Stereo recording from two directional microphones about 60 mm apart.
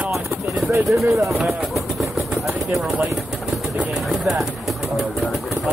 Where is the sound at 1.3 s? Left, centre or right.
Centre.